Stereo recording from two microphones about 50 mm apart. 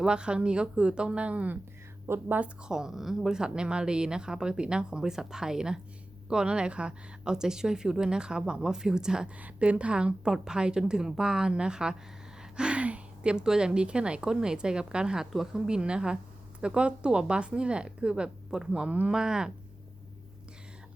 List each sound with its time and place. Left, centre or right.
0.0 s a woman's voice: centre
2.1 s a woman's voice: right
2.6 s speech: centre
9.4 s a woman's voice: right
12.4 s a sound: centre
13.3 s a woman's voice: centre